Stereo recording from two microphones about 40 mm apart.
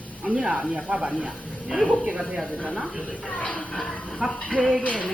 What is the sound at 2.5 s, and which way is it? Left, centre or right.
A woman's voice, left.